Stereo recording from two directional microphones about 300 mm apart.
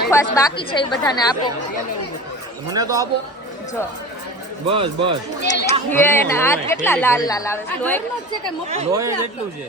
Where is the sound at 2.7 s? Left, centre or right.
Centre.